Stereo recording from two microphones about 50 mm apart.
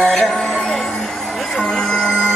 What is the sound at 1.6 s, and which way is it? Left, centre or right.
Music, centre.